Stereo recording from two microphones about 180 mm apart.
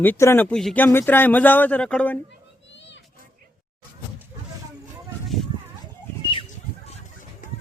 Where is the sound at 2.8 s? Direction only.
80° left.